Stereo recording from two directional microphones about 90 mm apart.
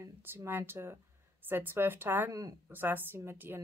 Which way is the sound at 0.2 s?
25° right (ahead or behind).